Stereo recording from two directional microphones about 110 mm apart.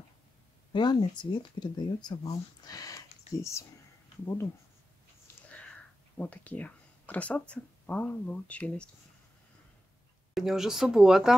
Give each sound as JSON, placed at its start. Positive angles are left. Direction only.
{"t": 0.7, "sound": "speech", "side_deg": 45}
{"t": 5.5, "sound": "speech", "side_deg": 10}
{"t": 10.3, "sound": "speech", "side_deg": -5}